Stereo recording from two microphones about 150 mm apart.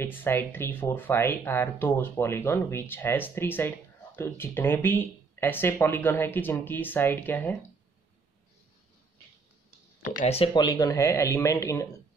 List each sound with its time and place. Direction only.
0.0 s speech: 15° left (ahead or behind)
10.0 s speech: 60° left (ahead or behind)
10.3 s speech: 35° left (ahead or behind)